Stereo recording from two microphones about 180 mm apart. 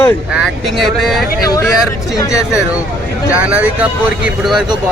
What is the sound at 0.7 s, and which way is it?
Speech, centre (ahead or behind).